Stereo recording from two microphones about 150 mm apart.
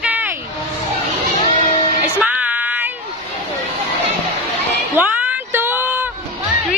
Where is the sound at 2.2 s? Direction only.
10° right (ahead or behind).